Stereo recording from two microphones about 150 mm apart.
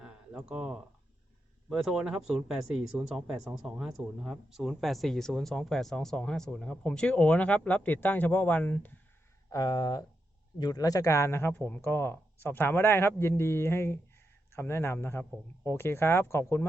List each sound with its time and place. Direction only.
0.0 s a sound: 5° right (ahead or behind)
1.7 s speech: centre (ahead or behind)
9.5 s speech: 25° left (ahead or behind)